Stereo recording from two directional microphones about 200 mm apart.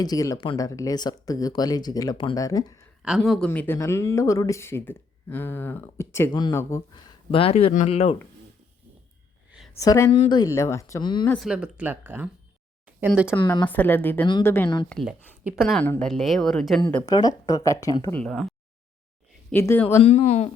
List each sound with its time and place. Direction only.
0.0 s speech: 20° left (ahead or behind)
3.0 s speech: centre (ahead or behind); by 7.0 s 15° left (ahead or behind)
7.3 s speech: 30° left (ahead or behind)
9.7 s speech: 15° left (ahead or behind)
11.3 s speech: 5° right (ahead or behind)
13.4 s speech: 20° left (ahead or behind)
13.7 s speech: 10° left (ahead or behind)
17.1 s speech: 20° left (ahead or behind); by 18.4 s 5° left (ahead or behind)
19.5 s speech: 10° left (ahead or behind)
20.0 s speech: 35° left (ahead or behind)